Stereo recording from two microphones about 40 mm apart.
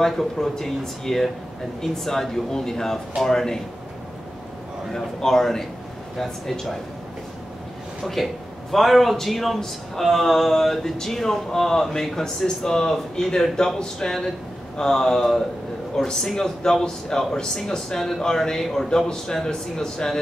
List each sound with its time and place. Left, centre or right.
0.0 s speech: centre
4.9 s speech: centre
8.0 s a man's voice: centre